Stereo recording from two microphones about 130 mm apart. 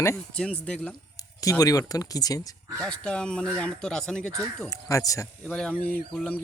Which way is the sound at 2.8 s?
10° left (ahead or behind).